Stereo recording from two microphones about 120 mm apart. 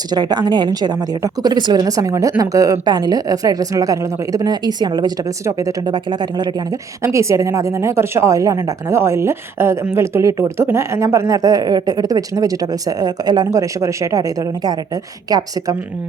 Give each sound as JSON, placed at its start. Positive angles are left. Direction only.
{"t": 0.1, "sound": "a woman's voice", "side_deg": -35}
{"t": 5.5, "sound": "a woman's voice", "side_deg": -25}
{"t": 5.8, "sound": "a woman's voice", "side_deg": -40}
{"t": 7.0, "sound": "a woman's voice", "side_deg": -25}